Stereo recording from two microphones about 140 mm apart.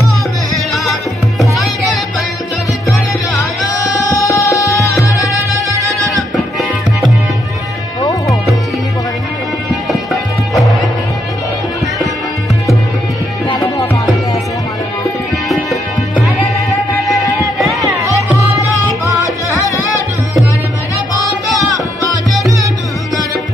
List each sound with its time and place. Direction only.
1.4 s music: centre (ahead or behind)
4.3 s music: 20° left (ahead or behind)
5.8 s music: 25° right (ahead or behind)
10.5 s music: centre (ahead or behind)
15.4 s music: centre (ahead or behind)
17.6 s music: centre (ahead or behind)
19.0 s music: 20° right (ahead or behind)